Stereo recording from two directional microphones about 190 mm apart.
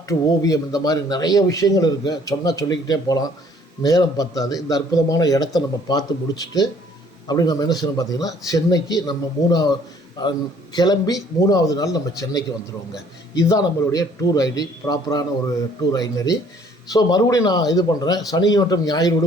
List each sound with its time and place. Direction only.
0.0 s a man's voice: 15° left (ahead or behind)